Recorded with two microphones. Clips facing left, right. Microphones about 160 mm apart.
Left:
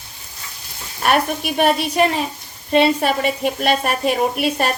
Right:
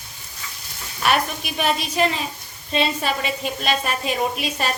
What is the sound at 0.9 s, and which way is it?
A woman's voice, 50° left (ahead or behind).